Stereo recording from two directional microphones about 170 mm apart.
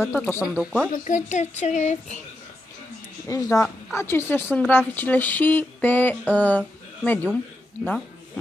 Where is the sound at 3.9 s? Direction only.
15° left (ahead or behind).